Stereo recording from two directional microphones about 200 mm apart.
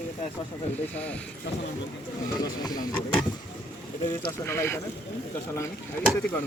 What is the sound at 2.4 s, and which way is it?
Speech, 20° left (ahead or behind).